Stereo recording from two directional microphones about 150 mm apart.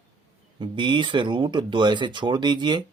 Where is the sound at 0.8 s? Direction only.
30° right (ahead or behind).